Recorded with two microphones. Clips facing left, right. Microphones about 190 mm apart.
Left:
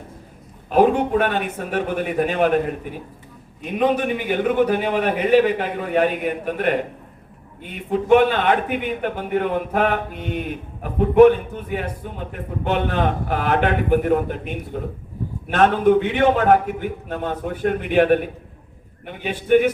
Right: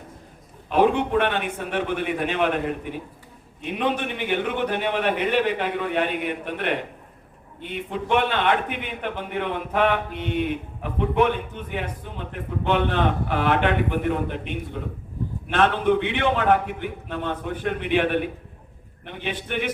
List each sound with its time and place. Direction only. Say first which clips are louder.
0.7 s a man's voice: left 3 dB; 40° left (ahead or behind)
3.6 s a man's voice: left 5 dB; 45° left (ahead or behind)